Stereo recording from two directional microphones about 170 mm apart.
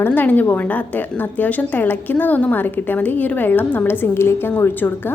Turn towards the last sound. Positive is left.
turn(degrees=10)  # may be behind; listen again after turning